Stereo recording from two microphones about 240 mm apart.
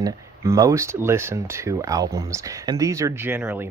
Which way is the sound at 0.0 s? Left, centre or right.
Centre.